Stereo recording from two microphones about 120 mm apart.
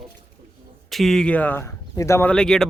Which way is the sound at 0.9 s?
Centre (ahead or behind).